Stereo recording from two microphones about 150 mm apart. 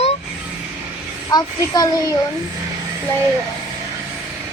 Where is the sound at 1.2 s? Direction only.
25° left (ahead or behind).